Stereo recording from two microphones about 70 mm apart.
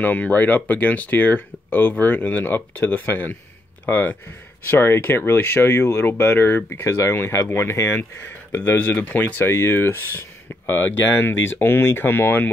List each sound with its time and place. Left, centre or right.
0.0 s speech: left
8.5 s speech: left
9.5 s speech: left